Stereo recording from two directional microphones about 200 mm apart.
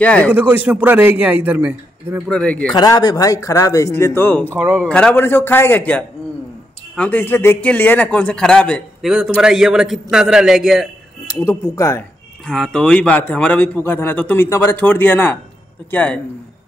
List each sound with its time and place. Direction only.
0.0 s a man's voice: 5° left (ahead or behind)
0.3 s a man's voice: 10° right (ahead or behind)
2.2 s a man's voice: 5° left (ahead or behind)
2.7 s a man's voice: 20° left (ahead or behind); by 10.9 s centre (ahead or behind)
11.3 s a man's voice: 15° left (ahead or behind)
12.4 s a man's voice: centre (ahead or behind)